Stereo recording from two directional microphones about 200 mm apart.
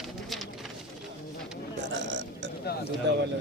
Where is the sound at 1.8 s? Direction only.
65° right (ahead or behind).